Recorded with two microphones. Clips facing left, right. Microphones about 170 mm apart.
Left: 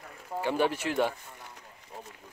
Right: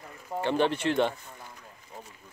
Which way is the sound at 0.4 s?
10° left (ahead or behind).